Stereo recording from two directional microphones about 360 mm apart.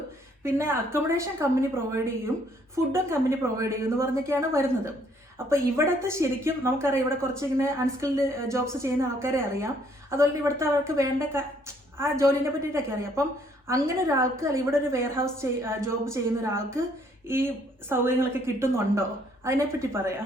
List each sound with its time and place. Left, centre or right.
0.4 s a woman's voice: centre